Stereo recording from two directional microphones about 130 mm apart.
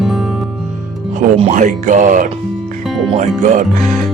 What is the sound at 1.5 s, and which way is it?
Speech, 75° right (ahead or behind).